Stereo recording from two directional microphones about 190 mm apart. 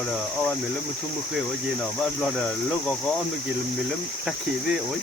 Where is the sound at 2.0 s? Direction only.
5° left (ahead or behind).